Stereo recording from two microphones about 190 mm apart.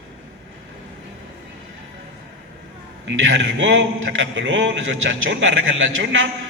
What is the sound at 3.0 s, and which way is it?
A man's voice, 70° right (ahead or behind).